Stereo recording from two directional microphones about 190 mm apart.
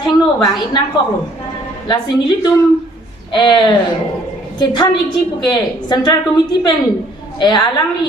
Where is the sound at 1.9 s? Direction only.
20° left (ahead or behind).